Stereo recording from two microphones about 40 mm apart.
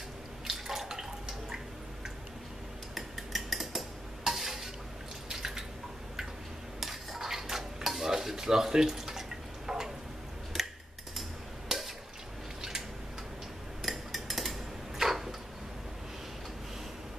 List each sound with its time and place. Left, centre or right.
0.5 s water: centre
2.9 s cutlery: centre
4.2 s stir: centre
5.3 s drip: centre
6.8 s dishes: centre
9.7 s a sound: centre
11.7 s water: centre
13.8 s cutlery: centre